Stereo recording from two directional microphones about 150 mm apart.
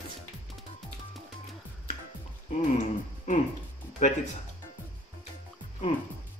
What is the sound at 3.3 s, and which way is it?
Music, 55° left (ahead or behind).